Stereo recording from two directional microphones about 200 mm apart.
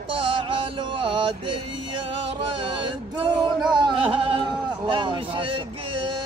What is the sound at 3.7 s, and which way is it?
Bleat, 25° right (ahead or behind).